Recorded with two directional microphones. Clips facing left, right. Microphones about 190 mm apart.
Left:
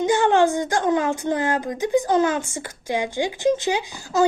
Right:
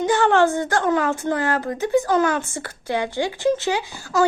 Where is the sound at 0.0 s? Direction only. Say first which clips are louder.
Even; 15° left (ahead or behind).